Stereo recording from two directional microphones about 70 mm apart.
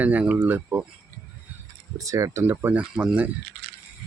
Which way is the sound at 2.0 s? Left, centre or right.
Right.